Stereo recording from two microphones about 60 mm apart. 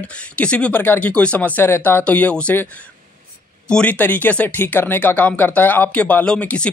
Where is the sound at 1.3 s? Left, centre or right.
Left.